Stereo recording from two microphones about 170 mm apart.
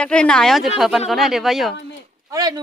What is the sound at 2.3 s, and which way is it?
Speech, 20° right (ahead or behind).